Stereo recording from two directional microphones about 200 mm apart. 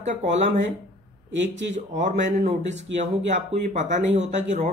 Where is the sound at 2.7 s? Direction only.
35° right (ahead or behind).